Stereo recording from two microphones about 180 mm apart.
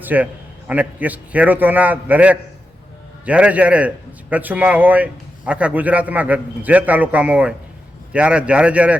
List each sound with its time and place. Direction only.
0.0 s a man's voice: 10° right (ahead or behind)